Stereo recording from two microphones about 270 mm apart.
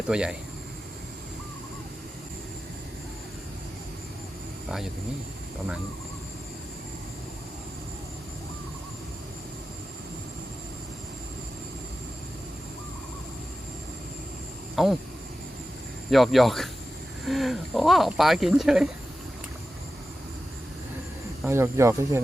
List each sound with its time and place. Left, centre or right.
0.1 s speech: centre
14.8 s speech: centre
16.0 s speech: centre
21.4 s speech: centre